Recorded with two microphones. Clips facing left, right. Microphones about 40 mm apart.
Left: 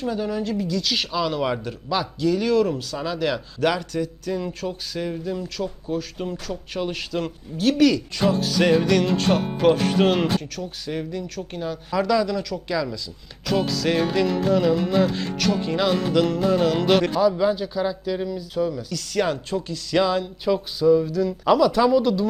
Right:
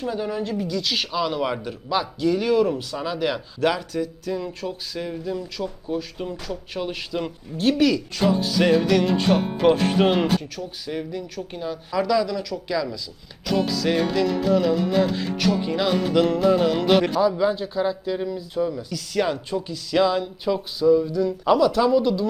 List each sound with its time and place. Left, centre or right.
0.0 s speech: centre
5.5 s speech: centre
6.5 s speech: centre
7.1 s speech: centre
17.5 s speech: centre
21.1 s speech: centre